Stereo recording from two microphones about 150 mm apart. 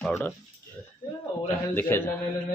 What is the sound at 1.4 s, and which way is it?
Speech, 15° left (ahead or behind).